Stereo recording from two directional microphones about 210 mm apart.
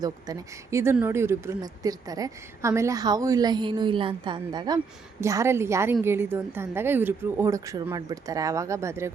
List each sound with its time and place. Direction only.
0.0 s speech: 15° right (ahead or behind)